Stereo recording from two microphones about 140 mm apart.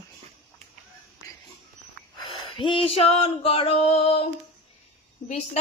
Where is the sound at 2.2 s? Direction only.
35° left (ahead or behind).